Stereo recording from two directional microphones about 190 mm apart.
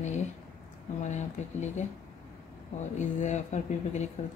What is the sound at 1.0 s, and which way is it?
Speech, 40° left (ahead or behind).